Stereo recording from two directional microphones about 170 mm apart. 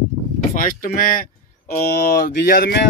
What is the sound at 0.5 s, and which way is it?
Speech, 55° left (ahead or behind).